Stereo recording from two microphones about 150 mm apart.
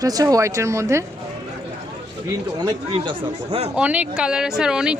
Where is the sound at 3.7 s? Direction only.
10° right (ahead or behind).